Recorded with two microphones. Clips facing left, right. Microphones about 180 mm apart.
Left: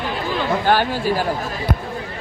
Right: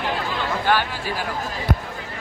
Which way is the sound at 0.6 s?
45° left (ahead or behind).